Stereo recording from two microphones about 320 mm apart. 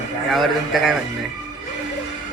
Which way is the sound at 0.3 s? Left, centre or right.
Centre.